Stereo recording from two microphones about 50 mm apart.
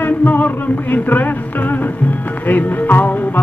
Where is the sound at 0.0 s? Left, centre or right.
Left.